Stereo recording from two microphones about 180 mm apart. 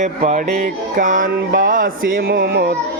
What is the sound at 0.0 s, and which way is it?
Music, 45° right (ahead or behind).